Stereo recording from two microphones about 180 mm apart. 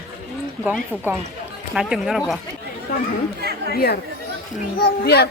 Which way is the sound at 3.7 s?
60° left (ahead or behind).